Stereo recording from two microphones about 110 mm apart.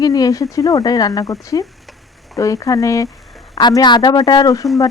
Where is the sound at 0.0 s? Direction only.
30° left (ahead or behind).